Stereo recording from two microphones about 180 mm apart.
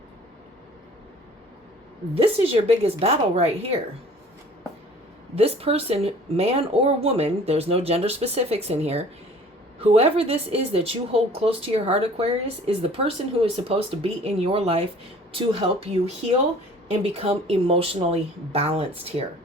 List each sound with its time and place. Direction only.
2.1 s speech: 35° right (ahead or behind)
5.3 s speech: 35° right (ahead or behind)
17.0 s speech: 35° right (ahead or behind)